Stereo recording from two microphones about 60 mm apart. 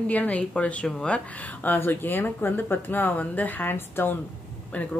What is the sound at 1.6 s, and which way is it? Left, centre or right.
Speech, left.